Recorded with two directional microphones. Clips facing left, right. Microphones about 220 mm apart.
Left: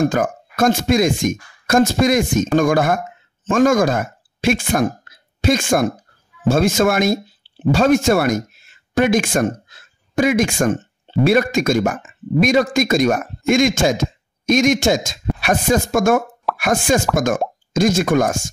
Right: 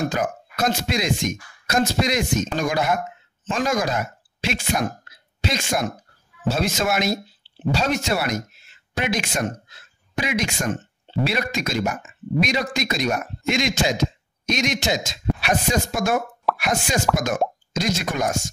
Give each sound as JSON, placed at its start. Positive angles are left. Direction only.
{"t": 0.0, "sound": "speech", "side_deg": 50}